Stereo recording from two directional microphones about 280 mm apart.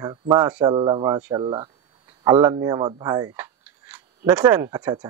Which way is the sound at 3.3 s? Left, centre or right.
Centre.